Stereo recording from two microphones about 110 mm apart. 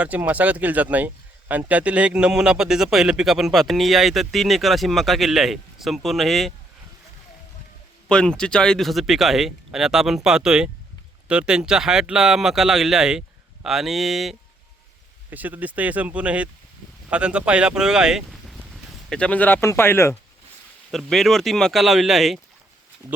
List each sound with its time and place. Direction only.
0.0 s speech: 15° right (ahead or behind)
8.0 s speech: 5° left (ahead or behind)
15.3 s speech: 15° right (ahead or behind); by 20.1 s 20° left (ahead or behind)
20.9 s speech: centre (ahead or behind)
23.0 s speech: 30° right (ahead or behind)